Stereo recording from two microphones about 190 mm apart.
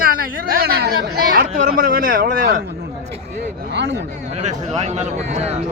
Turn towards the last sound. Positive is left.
turn(degrees=-35)  # may be behind; listen again after turning